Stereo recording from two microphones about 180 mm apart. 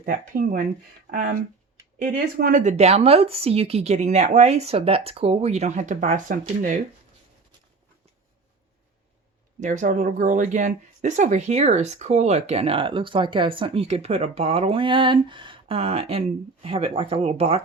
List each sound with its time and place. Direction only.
0.0 s speech: 50° right (ahead or behind)
2.0 s speech: 50° right (ahead or behind)
9.6 s speech: 45° right (ahead or behind)